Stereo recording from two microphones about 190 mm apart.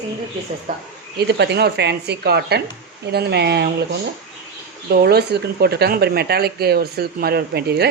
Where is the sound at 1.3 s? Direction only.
60° right (ahead or behind).